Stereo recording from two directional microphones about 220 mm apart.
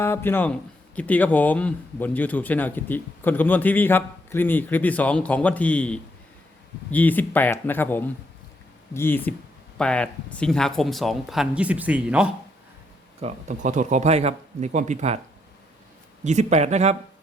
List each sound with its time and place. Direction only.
0.0 s speech: 10° left (ahead or behind)
13.2 s speech: 35° right (ahead or behind)
16.2 s speech: 30° right (ahead or behind)